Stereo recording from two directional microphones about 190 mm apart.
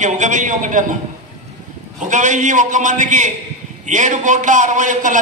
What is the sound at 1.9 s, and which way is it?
A man's voice, 40° right (ahead or behind).